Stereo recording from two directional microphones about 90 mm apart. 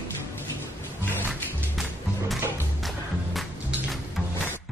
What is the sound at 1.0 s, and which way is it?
Music, 20° left (ahead or behind).